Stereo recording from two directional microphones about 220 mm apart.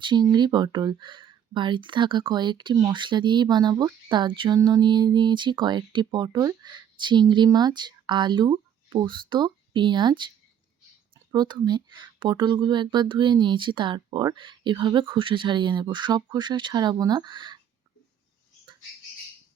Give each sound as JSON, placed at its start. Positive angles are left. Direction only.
{"t": 0.0, "sound": "speech", "side_deg": -20}